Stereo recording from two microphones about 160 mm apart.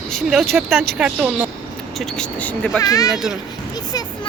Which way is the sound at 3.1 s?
Centre (ahead or behind).